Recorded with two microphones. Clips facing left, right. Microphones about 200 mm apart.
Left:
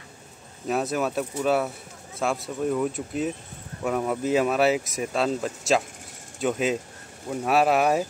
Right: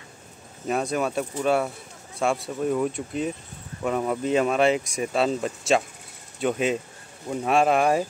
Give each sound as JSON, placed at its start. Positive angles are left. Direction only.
{"t": 0.7, "sound": "speech", "side_deg": 0}